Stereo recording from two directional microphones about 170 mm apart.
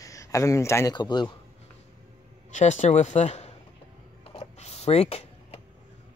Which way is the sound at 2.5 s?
40° left (ahead or behind).